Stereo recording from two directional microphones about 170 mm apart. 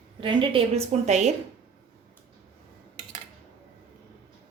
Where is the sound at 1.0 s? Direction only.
40° right (ahead or behind).